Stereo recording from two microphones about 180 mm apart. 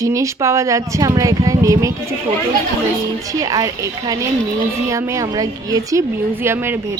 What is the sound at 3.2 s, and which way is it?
Speech, 20° right (ahead or behind).